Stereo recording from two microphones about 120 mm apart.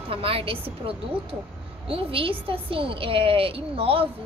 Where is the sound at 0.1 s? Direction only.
50° right (ahead or behind).